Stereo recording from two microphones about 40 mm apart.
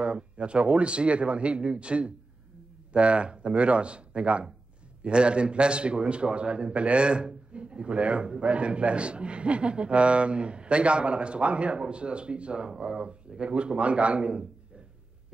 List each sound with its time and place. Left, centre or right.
0.0 s a man's voice: right